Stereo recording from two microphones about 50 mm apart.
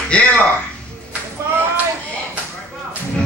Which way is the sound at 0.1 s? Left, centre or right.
Left.